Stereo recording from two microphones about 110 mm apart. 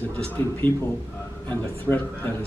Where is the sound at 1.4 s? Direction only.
15° left (ahead or behind).